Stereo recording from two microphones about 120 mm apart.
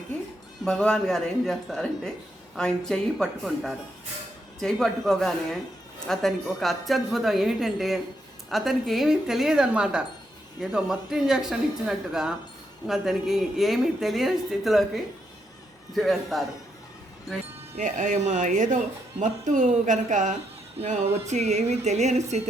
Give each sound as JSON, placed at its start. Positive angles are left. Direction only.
{"t": 0.6, "sound": "speech", "side_deg": 5}
{"t": 17.7, "sound": "speech", "side_deg": -90}
{"t": 20.8, "sound": "speech", "side_deg": -65}